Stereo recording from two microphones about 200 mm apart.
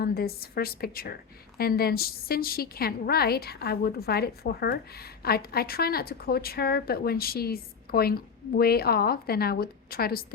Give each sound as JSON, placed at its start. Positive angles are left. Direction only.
{"t": 0.0, "sound": "a woman's voice", "side_deg": 50}